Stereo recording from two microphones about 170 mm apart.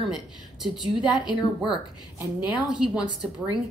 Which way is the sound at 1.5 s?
5° right (ahead or behind).